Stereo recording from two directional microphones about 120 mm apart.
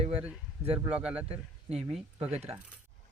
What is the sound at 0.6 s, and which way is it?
Mechanisms, 10° right (ahead or behind).